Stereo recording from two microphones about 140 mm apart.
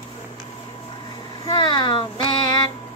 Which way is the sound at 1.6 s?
35° left (ahead or behind).